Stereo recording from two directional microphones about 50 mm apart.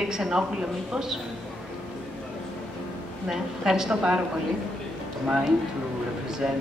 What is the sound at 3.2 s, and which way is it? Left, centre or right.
Speech, centre.